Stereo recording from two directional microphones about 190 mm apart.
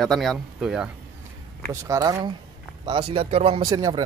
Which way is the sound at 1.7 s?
15° right (ahead or behind).